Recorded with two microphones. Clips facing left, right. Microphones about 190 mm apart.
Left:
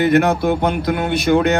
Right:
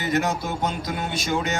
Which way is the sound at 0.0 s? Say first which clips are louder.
Left 10 dB; 60° left (ahead or behind).